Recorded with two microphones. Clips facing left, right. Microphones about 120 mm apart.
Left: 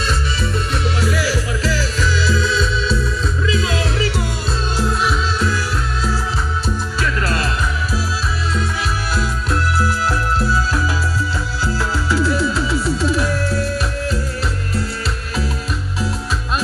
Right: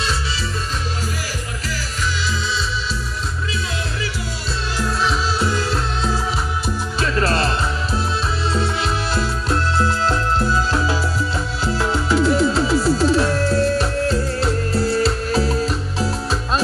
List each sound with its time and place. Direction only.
1.0 s music: 80° left
3.5 s music: 90° left
4.7 s music: 15° left (ahead or behind)
7.2 s music: 30° right (ahead or behind)
9.1 s music: 25° right (ahead or behind)